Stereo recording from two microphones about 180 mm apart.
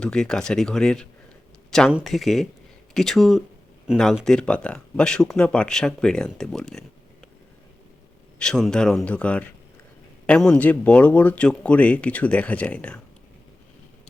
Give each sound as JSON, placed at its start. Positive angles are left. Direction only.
{"t": 0.0, "sound": "speech", "side_deg": 5}
{"t": 8.4, "sound": "speech", "side_deg": 0}